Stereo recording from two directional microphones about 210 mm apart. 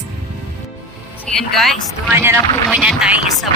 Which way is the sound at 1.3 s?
Centre (ahead or behind).